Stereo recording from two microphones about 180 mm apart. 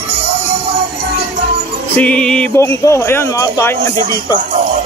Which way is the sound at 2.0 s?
5° left (ahead or behind).